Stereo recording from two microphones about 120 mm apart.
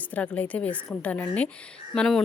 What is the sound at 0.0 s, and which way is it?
Speech, 10° left (ahead or behind).